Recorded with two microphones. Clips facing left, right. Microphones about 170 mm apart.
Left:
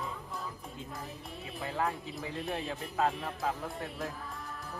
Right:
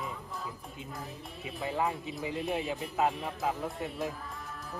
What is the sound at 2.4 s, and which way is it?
Speech, centre (ahead or behind).